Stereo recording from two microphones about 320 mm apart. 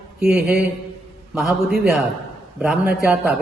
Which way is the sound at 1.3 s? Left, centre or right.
Centre.